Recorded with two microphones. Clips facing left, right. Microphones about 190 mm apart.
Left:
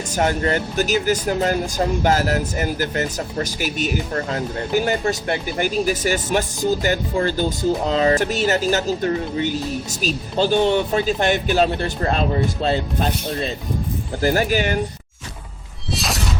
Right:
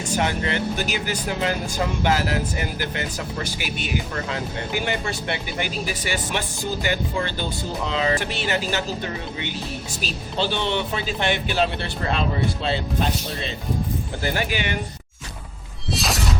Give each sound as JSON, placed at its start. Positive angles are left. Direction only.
{"t": 0.2, "sound": "speech", "side_deg": 45}
{"t": 10.0, "sound": "speech", "side_deg": 45}
{"t": 15.9, "sound": "shatter", "side_deg": 0}